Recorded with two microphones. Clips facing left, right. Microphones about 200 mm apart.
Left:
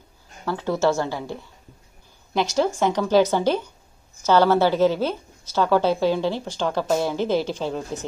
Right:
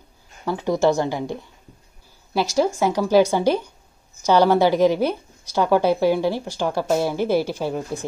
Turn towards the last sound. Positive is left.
turn(degrees=-10)  # may be behind; listen again after turning